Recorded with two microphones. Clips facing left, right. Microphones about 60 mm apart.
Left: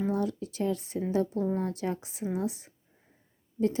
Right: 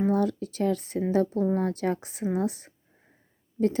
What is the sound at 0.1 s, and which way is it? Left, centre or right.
A woman's voice, right.